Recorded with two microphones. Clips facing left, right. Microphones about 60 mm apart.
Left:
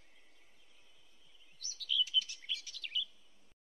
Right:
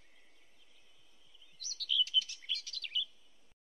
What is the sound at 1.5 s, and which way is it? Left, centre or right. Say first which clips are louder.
Chirp: right 1 dB; centre.